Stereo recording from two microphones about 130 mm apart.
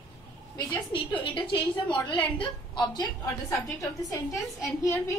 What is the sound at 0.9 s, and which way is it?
A woman's voice, 40° left (ahead or behind).